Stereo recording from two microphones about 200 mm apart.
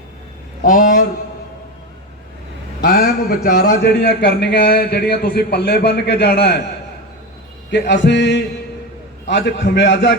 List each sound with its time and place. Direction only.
0.6 s a sound: 45° left (ahead or behind)
2.8 s a man's voice: 50° left (ahead or behind)
7.7 s a man's voice: 60° left (ahead or behind)